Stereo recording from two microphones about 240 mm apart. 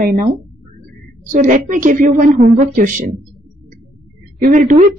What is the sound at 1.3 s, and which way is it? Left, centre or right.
A woman's voice, right.